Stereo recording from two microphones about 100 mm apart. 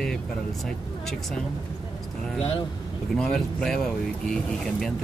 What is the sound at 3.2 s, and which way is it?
Speech, 5° left (ahead or behind).